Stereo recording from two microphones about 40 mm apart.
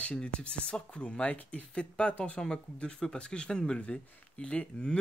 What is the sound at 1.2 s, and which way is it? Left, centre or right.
Speech, left.